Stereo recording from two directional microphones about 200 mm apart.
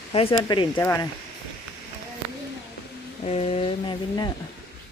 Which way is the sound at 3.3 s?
30° left (ahead or behind).